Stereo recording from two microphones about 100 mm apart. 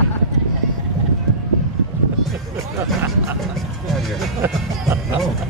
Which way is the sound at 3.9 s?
Centre (ahead or behind).